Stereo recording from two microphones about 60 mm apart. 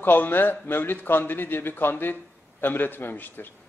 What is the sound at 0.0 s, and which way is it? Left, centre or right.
A man's voice, left.